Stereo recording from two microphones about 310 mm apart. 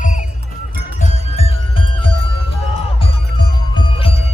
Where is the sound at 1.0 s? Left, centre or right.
Left.